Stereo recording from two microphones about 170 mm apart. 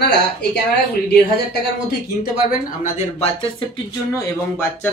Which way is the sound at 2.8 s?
35° left (ahead or behind).